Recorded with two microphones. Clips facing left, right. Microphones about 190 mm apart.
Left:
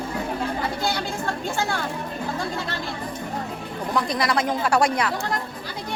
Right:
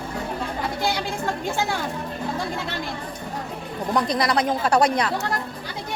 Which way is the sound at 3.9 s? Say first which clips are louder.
Right 2 dB; 20° right (ahead or behind).